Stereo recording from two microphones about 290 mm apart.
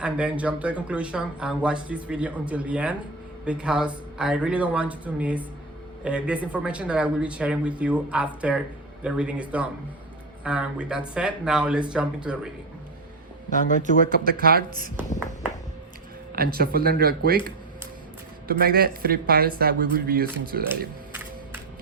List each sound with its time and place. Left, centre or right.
0.0 s speech: centre
13.5 s speech: left
14.3 s speech: right
16.3 s speech: right
18.4 s speech: right